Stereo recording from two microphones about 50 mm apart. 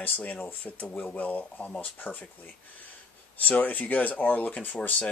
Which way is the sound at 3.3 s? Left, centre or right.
Left.